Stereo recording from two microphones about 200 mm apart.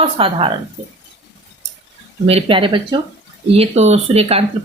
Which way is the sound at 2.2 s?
30° right (ahead or behind).